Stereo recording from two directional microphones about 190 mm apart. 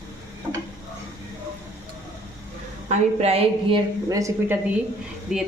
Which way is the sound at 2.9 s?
35° right (ahead or behind).